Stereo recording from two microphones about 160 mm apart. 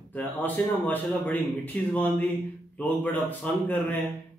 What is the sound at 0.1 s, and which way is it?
A man's voice, 10° left (ahead or behind).